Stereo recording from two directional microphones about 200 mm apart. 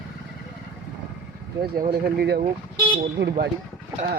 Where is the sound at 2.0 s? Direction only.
50° right (ahead or behind).